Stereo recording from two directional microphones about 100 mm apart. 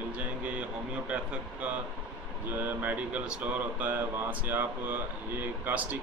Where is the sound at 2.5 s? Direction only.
20° right (ahead or behind).